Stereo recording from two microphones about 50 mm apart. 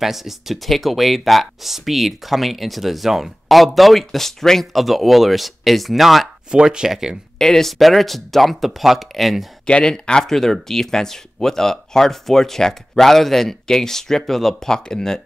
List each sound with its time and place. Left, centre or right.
0.0 s speech: centre
6.5 s speech: centre
7.3 s speech: centre
9.7 s speech: centre